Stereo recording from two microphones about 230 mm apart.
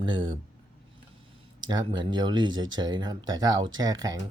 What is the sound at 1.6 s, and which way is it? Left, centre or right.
Speech, centre.